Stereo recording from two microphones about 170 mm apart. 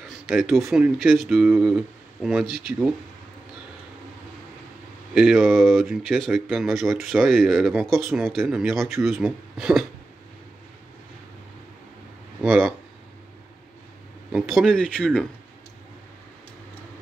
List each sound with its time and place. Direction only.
0.3 s speech: centre (ahead or behind)
5.1 s speech: 5° right (ahead or behind)
12.4 s speech: 5° right (ahead or behind)
14.3 s speech: centre (ahead or behind)